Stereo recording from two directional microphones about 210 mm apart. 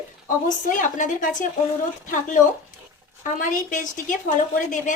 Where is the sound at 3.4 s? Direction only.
40° left (ahead or behind).